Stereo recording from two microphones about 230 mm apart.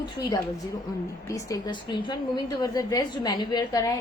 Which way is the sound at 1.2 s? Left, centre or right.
Centre.